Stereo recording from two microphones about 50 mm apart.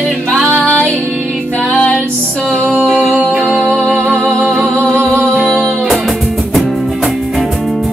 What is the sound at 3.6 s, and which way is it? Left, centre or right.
Music, centre.